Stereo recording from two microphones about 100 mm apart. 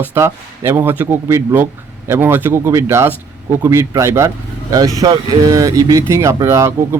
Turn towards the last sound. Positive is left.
turn(degrees=-30)  # may be behind; listen again after turning